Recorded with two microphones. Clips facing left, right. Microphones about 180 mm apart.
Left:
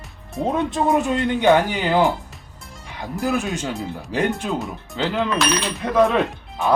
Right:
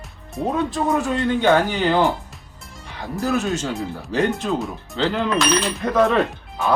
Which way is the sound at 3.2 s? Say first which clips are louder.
Right 1 dB; 15° left (ahead or behind).